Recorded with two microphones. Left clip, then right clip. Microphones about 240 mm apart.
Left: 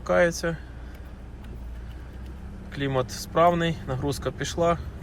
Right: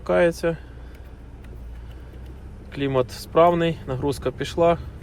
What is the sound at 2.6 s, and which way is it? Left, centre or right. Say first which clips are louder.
Speech: right 4 dB; centre.